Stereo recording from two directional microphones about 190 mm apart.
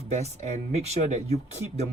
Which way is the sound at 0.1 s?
35° right (ahead or behind).